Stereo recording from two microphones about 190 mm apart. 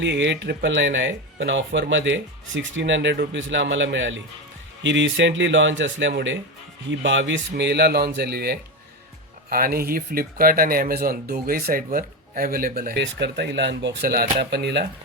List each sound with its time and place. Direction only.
0.0 s speech: 70° right (ahead or behind)